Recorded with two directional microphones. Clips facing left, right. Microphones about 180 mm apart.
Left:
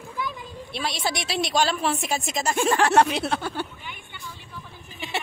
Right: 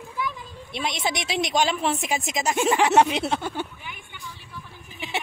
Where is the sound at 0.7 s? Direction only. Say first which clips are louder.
Right 1 dB; 20° right (ahead or behind).